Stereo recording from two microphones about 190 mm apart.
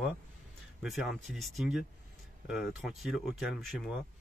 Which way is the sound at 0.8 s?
Centre (ahead or behind).